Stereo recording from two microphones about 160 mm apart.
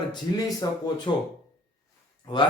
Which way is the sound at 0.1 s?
20° left (ahead or behind).